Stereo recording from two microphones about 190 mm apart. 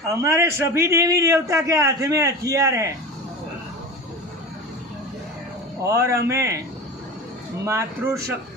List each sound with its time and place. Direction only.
0.2 s a man's voice: 15° right (ahead or behind)
5.8 s a man's voice: 15° right (ahead or behind)
7.6 s a man's voice: 15° right (ahead or behind)